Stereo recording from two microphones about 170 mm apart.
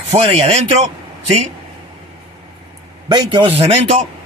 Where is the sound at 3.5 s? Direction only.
35° right (ahead or behind).